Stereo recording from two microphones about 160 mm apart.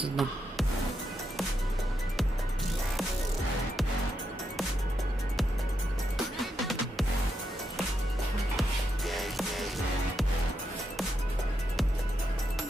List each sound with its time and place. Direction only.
0.1 s music: centre (ahead or behind)
6.4 s music: centre (ahead or behind)
8.5 s music: centre (ahead or behind)